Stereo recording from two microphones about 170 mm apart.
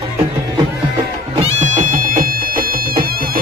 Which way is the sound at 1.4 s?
45° right (ahead or behind).